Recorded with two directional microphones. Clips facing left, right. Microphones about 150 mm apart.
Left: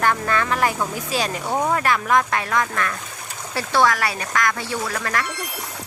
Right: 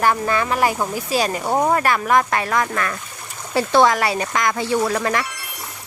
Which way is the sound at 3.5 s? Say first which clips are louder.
Right 4 dB; 20° right (ahead or behind).